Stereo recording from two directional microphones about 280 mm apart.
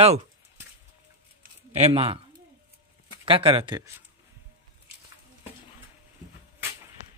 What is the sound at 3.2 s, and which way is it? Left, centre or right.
Speech, centre.